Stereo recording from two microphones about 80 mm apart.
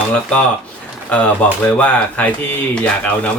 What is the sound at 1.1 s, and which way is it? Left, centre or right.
Speech, centre.